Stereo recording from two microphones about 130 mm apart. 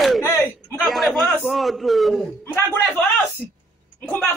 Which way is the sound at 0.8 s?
Centre (ahead or behind).